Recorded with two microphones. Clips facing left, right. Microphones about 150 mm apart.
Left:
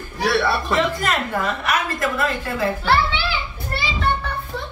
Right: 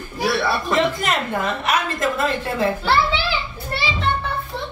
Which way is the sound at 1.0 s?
25° right (ahead or behind).